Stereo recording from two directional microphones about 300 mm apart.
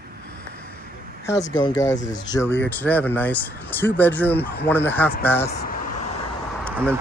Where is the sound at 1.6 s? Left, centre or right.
Centre.